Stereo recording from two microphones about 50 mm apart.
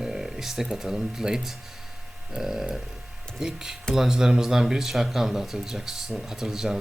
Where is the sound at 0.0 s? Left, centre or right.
Centre.